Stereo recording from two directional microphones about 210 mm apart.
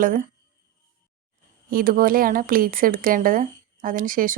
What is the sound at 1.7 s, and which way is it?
Speech, 45° right (ahead or behind).